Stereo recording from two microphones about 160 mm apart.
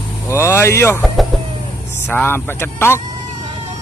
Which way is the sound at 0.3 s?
15° left (ahead or behind).